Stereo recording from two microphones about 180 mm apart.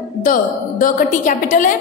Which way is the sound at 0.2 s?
50° left (ahead or behind).